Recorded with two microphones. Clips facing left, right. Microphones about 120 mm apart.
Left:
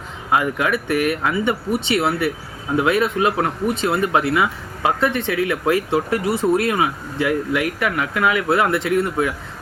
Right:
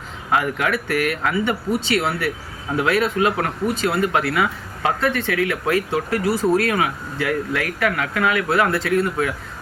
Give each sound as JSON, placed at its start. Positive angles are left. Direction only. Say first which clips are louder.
{"t": 0.3, "sound": "speech", "louder": "left 1 dB", "side_deg": 20}